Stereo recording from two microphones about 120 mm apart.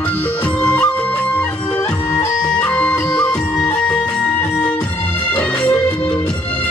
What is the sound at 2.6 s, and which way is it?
Music, 10° left (ahead or behind).